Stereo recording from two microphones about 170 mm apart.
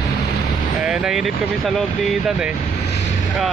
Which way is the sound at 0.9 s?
5° right (ahead or behind).